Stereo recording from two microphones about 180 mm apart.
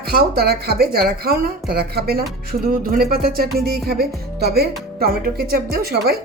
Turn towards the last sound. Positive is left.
turn(degrees=-60)  # may be behind; listen again after turning